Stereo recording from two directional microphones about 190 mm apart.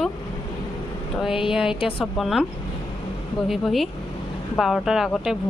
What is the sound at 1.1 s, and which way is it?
Speech, centre (ahead or behind).